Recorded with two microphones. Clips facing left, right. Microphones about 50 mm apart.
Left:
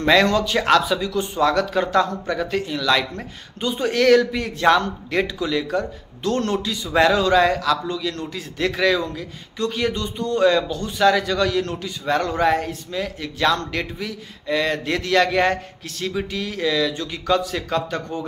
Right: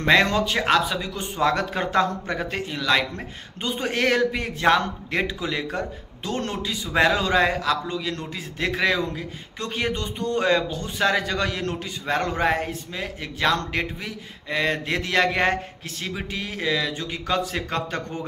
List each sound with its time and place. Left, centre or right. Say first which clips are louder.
0.0 s speech: left 2 dB; right